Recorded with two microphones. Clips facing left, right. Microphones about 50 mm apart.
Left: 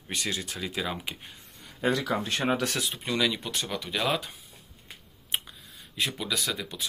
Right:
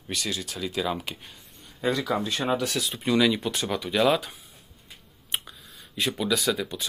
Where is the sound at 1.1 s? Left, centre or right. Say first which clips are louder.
Right 1 dB; centre.